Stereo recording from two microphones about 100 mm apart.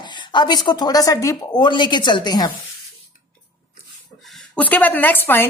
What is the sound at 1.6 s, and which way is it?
Speech, 50° left (ahead or behind).